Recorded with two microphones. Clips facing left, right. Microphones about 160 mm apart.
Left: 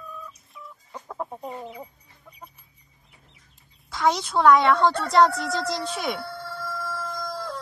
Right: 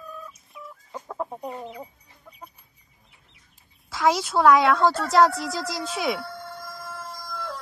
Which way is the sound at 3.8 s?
Centre (ahead or behind).